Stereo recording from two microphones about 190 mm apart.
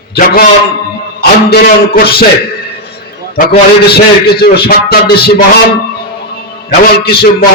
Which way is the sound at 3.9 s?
55° left (ahead or behind).